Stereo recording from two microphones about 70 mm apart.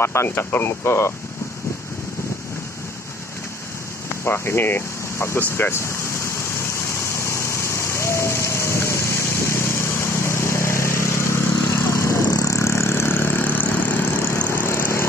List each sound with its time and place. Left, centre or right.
0.0 s speech: left
4.2 s speech: left
5.4 s a sound: left
12.3 s vehicle: left
14.7 s vehicle: left